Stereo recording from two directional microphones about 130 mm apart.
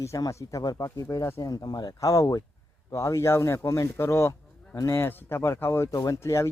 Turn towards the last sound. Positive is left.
turn(degrees=20)  # may be behind; listen again after turning